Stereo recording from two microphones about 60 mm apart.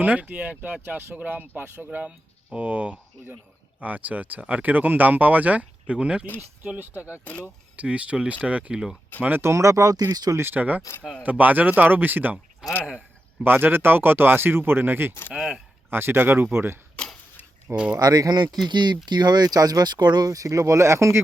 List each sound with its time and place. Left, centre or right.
0.0 s speech: right
2.0 s speech: right
6.7 s speech: right
9.4 s speech: right
10.3 s speech: right
10.6 s speech: right
12.6 s speech: centre
13.4 s speech: right
15.3 s speech: centre
15.9 s speech: right
17.9 s speech: right
18.5 s speech: centre
19.4 s speech: right